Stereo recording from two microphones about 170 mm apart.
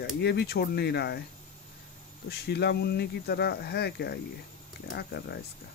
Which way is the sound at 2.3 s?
75° left (ahead or behind).